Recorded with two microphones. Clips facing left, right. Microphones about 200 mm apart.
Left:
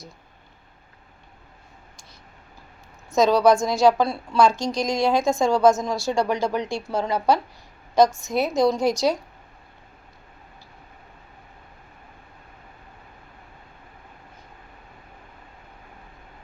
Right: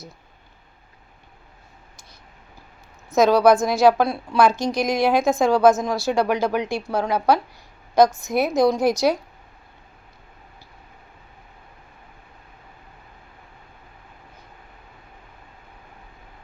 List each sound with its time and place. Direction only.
3.1 s a woman's voice: 5° right (ahead or behind)
4.5 s speech: 55° right (ahead or behind)
4.8 s a woman's voice: 5° right (ahead or behind)